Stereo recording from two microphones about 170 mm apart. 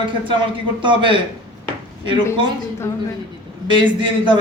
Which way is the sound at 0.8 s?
30° right (ahead or behind).